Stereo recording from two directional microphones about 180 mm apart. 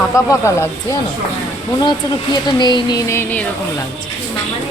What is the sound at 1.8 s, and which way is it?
Speech, 25° left (ahead or behind).